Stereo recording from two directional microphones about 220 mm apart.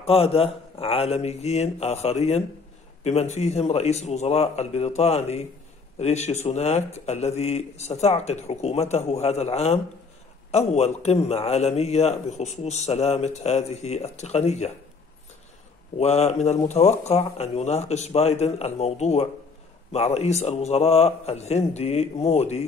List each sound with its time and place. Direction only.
0.0 s a man's voice: 25° left (ahead or behind)
16.0 s a man's voice: 30° left (ahead or behind)